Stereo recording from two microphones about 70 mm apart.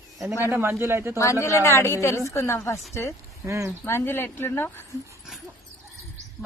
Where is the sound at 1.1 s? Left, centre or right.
Left.